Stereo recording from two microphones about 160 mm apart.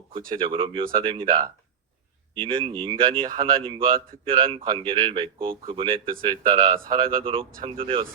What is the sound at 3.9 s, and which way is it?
Speech, 65° right (ahead or behind).